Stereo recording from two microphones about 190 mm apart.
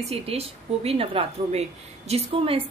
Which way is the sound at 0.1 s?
30° right (ahead or behind).